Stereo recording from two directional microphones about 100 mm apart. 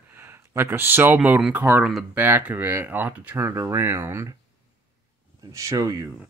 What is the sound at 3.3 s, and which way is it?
Speech, 25° right (ahead or behind).